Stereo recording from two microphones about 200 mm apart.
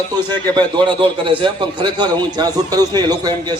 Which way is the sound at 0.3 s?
20° right (ahead or behind).